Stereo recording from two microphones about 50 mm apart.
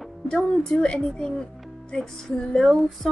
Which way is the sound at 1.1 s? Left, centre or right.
Centre.